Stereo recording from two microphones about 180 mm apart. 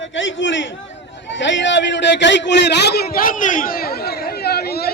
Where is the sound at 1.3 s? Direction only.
90° left.